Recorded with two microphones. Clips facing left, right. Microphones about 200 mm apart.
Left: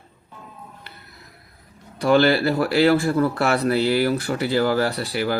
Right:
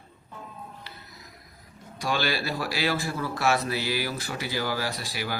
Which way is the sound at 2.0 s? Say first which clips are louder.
Left 12 dB; 60° left (ahead or behind).